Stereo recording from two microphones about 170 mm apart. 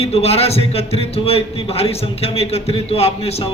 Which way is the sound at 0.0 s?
35° left (ahead or behind).